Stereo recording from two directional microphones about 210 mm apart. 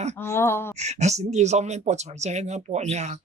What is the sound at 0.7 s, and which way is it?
Speech, 30° right (ahead or behind).